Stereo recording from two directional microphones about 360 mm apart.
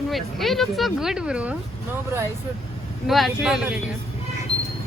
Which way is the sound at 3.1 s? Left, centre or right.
Centre.